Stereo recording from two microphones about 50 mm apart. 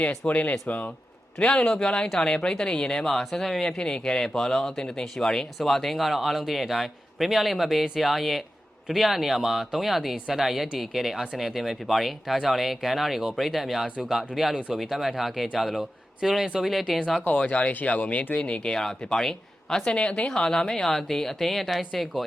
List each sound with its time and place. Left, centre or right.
0.3 s speech: left; by 17.0 s centre
17.3 s speech: left; by 22.2 s centre